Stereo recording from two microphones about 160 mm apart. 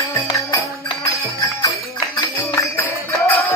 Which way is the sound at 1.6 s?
20° left (ahead or behind).